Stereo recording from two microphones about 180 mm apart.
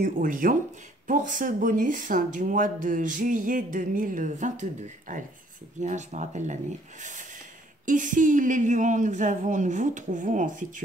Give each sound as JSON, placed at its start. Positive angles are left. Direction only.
{"t": 0.0, "sound": "speech", "side_deg": -50}